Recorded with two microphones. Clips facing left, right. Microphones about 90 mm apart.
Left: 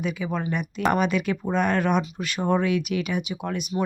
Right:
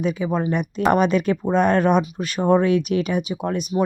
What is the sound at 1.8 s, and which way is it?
Speech, 25° right (ahead or behind).